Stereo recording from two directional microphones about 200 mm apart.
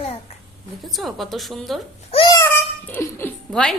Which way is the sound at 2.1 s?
25° left (ahead or behind).